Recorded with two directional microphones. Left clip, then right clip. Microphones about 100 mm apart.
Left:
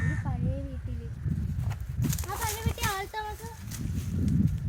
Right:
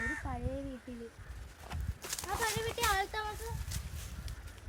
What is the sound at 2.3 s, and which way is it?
Speech, 60° left (ahead or behind).